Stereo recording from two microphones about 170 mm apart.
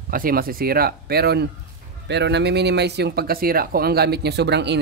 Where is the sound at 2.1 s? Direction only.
90° right.